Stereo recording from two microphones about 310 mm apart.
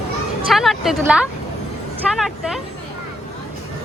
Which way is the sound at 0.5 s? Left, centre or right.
Centre.